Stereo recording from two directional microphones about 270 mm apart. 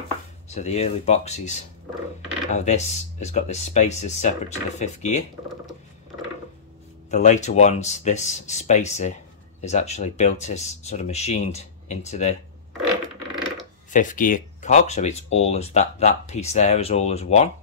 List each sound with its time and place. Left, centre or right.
0.6 s speech: left
7.1 s speech: left
13.8 s speech: left